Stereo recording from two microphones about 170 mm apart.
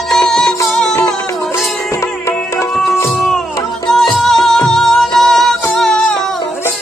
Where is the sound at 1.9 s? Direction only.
15° left (ahead or behind).